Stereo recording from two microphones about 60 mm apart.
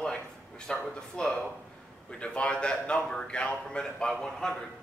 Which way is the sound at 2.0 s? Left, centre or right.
Centre.